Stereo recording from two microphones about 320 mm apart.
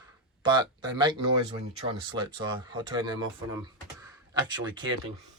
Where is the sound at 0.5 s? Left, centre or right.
Centre.